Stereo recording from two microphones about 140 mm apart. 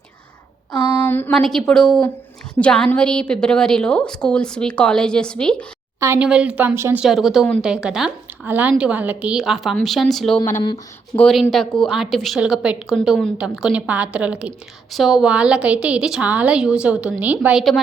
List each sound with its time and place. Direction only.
1.0 s a sound: 15° left (ahead or behind)
1.3 s a woman's voice: 5° left (ahead or behind)
6.1 s a woman's voice: 10° right (ahead or behind)
7.0 s a woman's voice: centre (ahead or behind)
11.1 s speech: 20° left (ahead or behind)
11.5 s a woman's voice: 5° left (ahead or behind)